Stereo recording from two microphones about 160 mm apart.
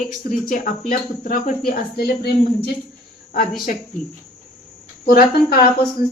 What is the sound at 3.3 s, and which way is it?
Speech, 65° left (ahead or behind).